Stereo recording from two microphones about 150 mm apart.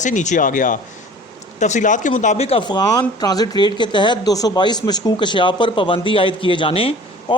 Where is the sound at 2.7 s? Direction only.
25° left (ahead or behind).